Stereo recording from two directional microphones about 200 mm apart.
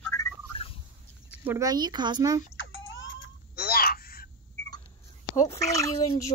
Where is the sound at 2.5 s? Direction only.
75° left (ahead or behind); by 4.3 s 50° left (ahead or behind).